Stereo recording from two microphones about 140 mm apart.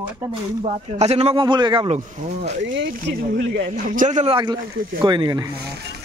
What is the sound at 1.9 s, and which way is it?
Speech, 50° right (ahead or behind).